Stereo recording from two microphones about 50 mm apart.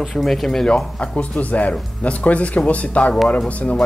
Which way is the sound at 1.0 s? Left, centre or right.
Left.